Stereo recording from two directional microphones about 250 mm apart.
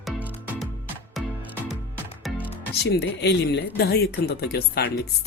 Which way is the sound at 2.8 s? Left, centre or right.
Left.